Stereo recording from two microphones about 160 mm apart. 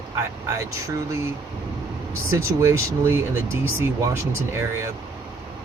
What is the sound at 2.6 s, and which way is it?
Speech, 15° right (ahead or behind).